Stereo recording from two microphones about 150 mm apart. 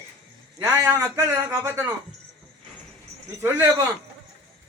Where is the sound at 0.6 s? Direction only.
20° right (ahead or behind).